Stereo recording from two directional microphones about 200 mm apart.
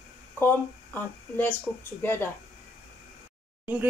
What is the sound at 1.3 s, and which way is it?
Speech, 10° left (ahead or behind).